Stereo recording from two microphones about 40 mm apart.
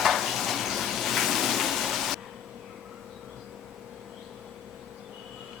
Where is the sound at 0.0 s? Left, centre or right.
Centre.